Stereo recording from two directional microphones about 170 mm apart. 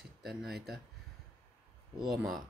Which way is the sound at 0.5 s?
70° right (ahead or behind).